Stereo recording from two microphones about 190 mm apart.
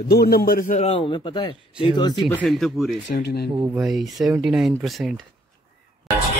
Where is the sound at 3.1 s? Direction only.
55° left (ahead or behind).